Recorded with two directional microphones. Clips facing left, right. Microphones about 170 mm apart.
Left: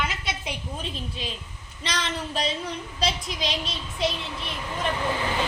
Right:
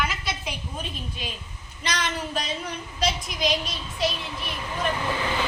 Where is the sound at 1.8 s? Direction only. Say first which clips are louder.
Right 1 dB; 30° left (ahead or behind).